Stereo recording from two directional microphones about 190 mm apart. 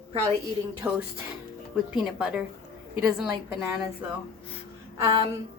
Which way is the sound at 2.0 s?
5° right (ahead or behind).